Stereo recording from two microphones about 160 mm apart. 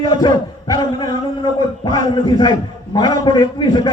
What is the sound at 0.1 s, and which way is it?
A man's voice, 25° left (ahead or behind).